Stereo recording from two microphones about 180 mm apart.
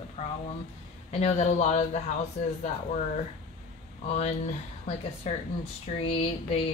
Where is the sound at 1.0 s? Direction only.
35° left (ahead or behind).